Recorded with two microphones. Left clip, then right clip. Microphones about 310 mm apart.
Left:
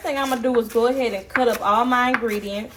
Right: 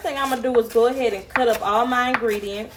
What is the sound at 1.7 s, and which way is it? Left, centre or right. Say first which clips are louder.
Speech: left 1 dB; centre.